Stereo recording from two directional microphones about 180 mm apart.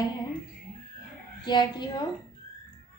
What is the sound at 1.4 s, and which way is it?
Speech, 25° left (ahead or behind).